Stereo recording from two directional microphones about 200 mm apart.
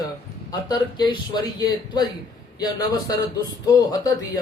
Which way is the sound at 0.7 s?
20° left (ahead or behind).